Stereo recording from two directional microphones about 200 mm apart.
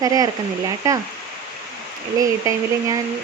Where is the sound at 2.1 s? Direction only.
15° right (ahead or behind).